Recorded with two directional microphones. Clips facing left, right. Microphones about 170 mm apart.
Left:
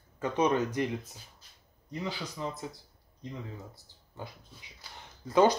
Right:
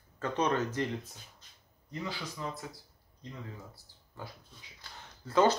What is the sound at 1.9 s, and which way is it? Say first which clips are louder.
Speech: left 2 dB; 20° left (ahead or behind).